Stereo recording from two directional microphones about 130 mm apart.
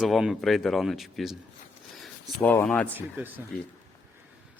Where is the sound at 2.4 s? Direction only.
10° left (ahead or behind).